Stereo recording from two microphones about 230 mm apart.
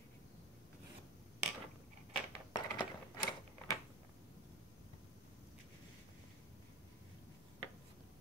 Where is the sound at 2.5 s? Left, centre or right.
Centre.